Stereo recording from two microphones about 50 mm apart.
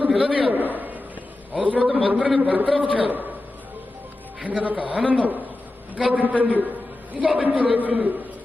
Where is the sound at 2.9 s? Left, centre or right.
Right.